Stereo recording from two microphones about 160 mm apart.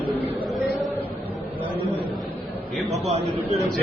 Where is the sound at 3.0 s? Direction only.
40° right (ahead or behind).